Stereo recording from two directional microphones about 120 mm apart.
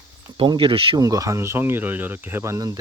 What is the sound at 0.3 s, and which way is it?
Speech, 45° right (ahead or behind).